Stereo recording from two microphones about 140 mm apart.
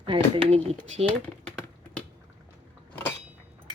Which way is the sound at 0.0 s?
40° right (ahead or behind).